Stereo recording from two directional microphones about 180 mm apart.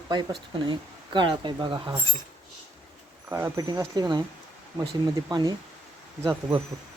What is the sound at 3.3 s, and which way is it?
Speech, 15° right (ahead or behind).